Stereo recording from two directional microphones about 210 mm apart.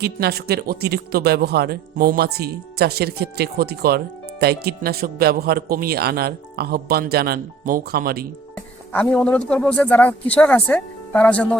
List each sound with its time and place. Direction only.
0.0 s speech: 50° right (ahead or behind)
8.9 s speech: 5° left (ahead or behind)